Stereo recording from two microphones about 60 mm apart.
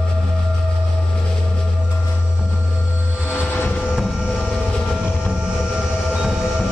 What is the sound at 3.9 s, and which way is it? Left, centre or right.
Vehicle, centre.